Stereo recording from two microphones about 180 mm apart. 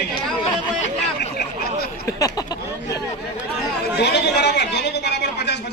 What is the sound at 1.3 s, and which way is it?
Speech, 60° left (ahead or behind).